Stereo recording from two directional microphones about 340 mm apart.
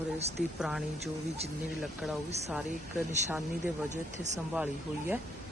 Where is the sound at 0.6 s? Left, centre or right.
Centre.